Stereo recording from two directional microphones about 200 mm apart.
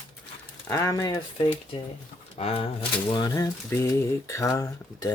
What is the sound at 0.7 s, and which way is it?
Speech, 15° left (ahead or behind).